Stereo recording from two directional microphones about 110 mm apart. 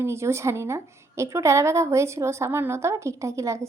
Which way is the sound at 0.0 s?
25° right (ahead or behind).